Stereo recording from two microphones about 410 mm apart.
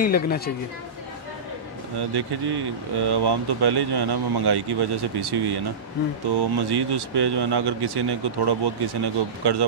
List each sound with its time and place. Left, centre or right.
0.0 s a woman's voice: left
2.0 s speech: right